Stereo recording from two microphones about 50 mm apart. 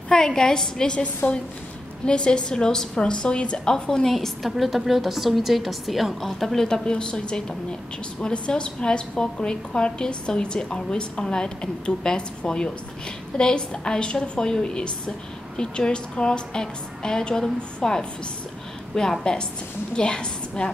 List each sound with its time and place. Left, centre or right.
0.1 s a woman's voice: centre